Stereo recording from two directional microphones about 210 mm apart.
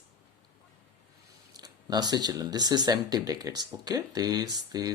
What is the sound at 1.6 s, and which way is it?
Speech, 20° right (ahead or behind).